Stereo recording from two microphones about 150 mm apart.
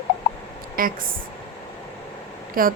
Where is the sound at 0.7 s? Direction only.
70° right (ahead or behind).